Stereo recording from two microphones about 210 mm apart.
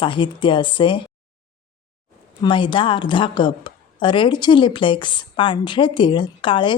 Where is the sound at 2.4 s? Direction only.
20° left (ahead or behind).